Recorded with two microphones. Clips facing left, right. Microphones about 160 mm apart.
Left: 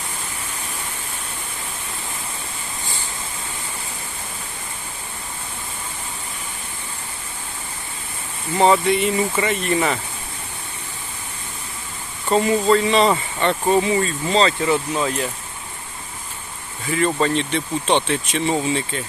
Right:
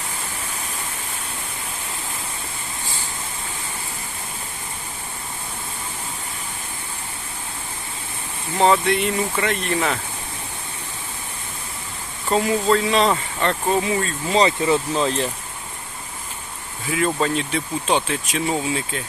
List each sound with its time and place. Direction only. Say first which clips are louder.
8.5 s speech: left 1 dB; centre (ahead or behind)
12.3 s speech: left 2 dB; centre (ahead or behind)
14.3 s speech: right 1 dB; 20° right (ahead or behind)
16.8 s speech: left 2 dB; centre (ahead or behind)